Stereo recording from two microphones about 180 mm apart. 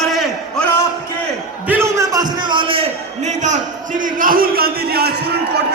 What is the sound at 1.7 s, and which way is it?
A man's voice, 15° right (ahead or behind).